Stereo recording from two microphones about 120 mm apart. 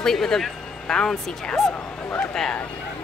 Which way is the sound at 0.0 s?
5° left (ahead or behind).